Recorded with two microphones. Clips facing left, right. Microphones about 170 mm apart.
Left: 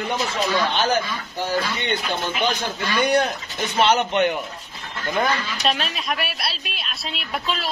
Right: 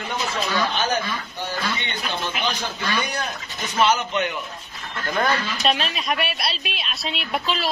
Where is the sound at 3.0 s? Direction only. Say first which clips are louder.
Left 9 dB; 55° left (ahead or behind).